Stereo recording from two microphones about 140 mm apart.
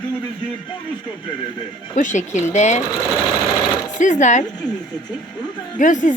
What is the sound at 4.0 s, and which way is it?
Speech, 60° left (ahead or behind).